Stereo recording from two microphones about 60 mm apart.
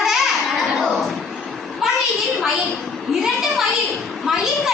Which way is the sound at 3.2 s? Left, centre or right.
Centre.